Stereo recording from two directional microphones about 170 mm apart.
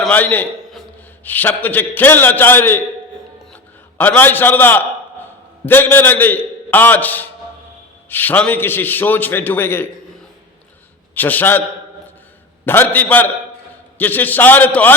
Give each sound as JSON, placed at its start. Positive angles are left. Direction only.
{"t": 0.0, "sound": "a man's voice", "side_deg": 10}
{"t": 11.1, "sound": "a man's voice", "side_deg": 10}
{"t": 12.6, "sound": "a man's voice", "side_deg": 10}